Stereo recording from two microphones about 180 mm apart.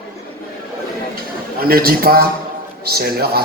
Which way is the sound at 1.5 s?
55° right (ahead or behind).